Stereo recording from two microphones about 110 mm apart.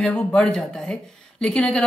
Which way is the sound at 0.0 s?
10° left (ahead or behind).